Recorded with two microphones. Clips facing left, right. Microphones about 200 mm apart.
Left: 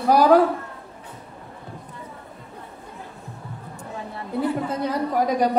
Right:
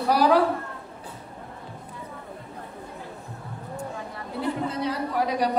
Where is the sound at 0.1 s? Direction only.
45° left (ahead or behind).